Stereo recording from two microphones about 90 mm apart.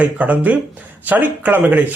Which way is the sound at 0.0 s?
15° right (ahead or behind).